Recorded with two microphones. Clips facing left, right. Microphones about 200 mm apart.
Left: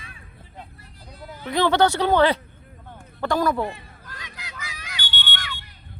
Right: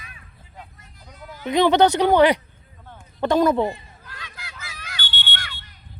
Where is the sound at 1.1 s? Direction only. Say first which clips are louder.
Left 1 dB; 35° left (ahead or behind).